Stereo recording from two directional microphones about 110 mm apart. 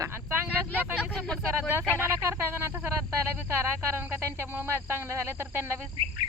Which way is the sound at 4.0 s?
20° right (ahead or behind).